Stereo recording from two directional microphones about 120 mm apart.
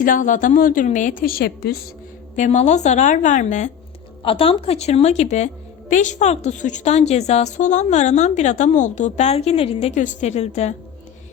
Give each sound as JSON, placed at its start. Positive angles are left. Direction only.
{"t": 0.2, "sound": "speech", "side_deg": 90}
{"t": 2.3, "sound": "a woman's voice", "side_deg": 80}
{"t": 4.2, "sound": "speech", "side_deg": 50}
{"t": 5.9, "sound": "a woman's voice", "side_deg": 90}
{"t": 9.9, "sound": "a woman's voice", "side_deg": 90}